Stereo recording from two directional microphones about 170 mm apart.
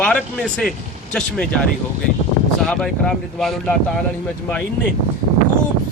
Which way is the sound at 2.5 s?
5° left (ahead or behind).